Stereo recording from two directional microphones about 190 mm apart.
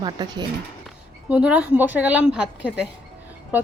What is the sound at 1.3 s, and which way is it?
Speech, 5° right (ahead or behind).